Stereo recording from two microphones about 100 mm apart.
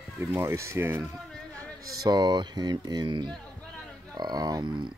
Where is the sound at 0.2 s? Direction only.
25° right (ahead or behind).